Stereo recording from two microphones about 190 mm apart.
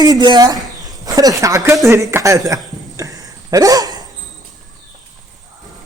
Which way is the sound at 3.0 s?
20° right (ahead or behind).